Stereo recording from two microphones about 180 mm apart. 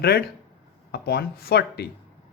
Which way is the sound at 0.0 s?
60° left (ahead or behind).